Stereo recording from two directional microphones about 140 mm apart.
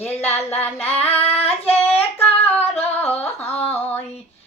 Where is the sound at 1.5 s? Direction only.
15° left (ahead or behind).